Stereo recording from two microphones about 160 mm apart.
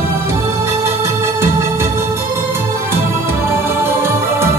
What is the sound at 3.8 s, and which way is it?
Music, 15° right (ahead or behind).